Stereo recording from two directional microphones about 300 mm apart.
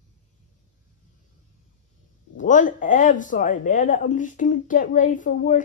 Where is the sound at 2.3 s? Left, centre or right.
Left.